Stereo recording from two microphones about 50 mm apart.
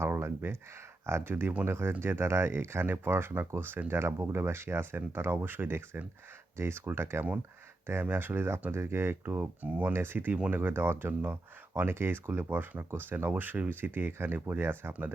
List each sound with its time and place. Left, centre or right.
0.0 s a sound: right
1.0 s speech: right
1.6 s speech: right
1.9 s speech: right
9.6 s speech: right
9.9 s speech: right